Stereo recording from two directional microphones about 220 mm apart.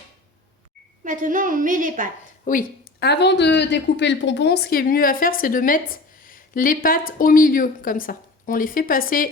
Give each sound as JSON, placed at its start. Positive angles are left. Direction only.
{"t": 1.0, "sound": "a woman's voice", "side_deg": -35}
{"t": 2.4, "sound": "a woman's voice", "side_deg": 40}